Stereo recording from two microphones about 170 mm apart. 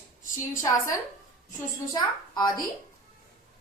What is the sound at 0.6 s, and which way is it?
Speech, 20° left (ahead or behind).